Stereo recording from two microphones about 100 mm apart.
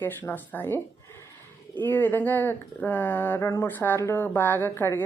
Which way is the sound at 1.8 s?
20° left (ahead or behind).